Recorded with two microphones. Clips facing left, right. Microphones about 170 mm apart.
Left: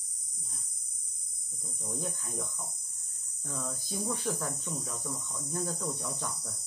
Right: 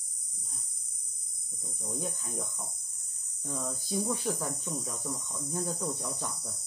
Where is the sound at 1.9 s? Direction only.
15° right (ahead or behind).